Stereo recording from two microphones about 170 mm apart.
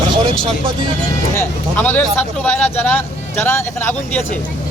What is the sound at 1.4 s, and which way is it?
Speech, 10° left (ahead or behind).